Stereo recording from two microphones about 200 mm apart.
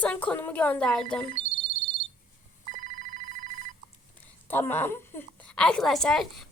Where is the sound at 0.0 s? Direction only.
5° left (ahead or behind).